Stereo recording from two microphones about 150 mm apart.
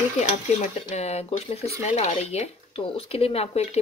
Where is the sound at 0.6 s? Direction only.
50° left (ahead or behind).